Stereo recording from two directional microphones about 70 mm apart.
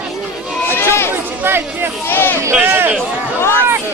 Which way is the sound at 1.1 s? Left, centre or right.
Right.